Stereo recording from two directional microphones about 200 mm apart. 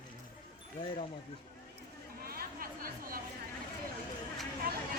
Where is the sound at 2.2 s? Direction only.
50° right (ahead or behind).